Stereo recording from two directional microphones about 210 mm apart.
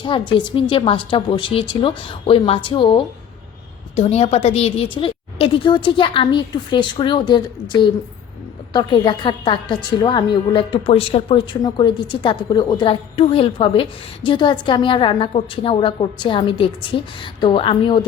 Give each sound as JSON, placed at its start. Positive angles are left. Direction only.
{"t": 0.0, "sound": "a woman's voice", "side_deg": 25}